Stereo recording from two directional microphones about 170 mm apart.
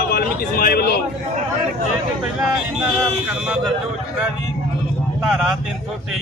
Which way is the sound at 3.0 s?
5° right (ahead or behind).